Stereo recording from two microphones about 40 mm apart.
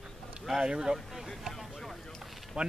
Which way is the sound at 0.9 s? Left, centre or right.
Centre.